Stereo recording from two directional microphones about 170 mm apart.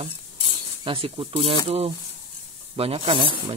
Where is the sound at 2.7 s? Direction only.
35° right (ahead or behind).